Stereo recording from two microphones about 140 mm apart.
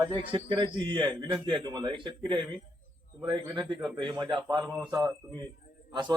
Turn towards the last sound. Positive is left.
turn(degrees=0)  # may be behind; listen again after turning